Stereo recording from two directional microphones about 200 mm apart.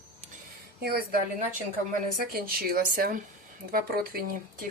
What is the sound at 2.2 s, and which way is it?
Speech, 50° right (ahead or behind).